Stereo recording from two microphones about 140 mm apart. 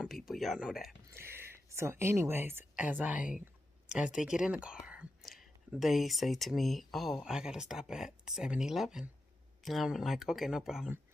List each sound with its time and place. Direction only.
0.0 s speech: centre (ahead or behind)
1.1 s speech: 15° right (ahead or behind)